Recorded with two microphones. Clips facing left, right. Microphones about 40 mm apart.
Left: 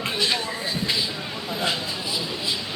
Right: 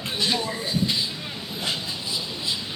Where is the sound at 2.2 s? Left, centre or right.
Left.